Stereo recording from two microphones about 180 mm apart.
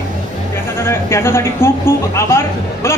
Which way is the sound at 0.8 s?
15° left (ahead or behind).